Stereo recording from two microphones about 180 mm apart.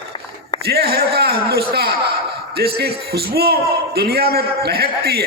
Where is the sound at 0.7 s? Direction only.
60° right (ahead or behind).